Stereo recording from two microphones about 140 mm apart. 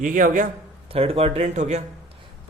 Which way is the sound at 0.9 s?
45° right (ahead or behind).